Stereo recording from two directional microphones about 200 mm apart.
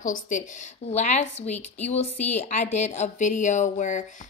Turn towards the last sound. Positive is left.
turn(degrees=40)  # may be behind; listen again after turning